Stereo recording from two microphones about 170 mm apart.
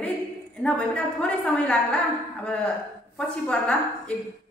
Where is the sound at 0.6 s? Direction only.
5° left (ahead or behind).